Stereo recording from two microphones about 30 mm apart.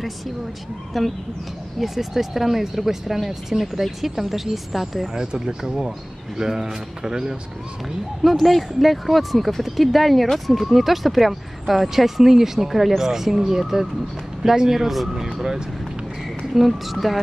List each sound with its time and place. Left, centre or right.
0.9 s speech: centre
5.1 s speech: right
8.2 s speech: centre